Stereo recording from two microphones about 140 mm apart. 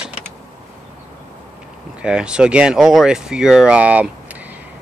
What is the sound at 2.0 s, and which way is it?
Speech, 5° right (ahead or behind).